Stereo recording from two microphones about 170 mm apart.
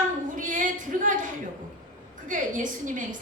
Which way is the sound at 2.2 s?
50° right (ahead or behind).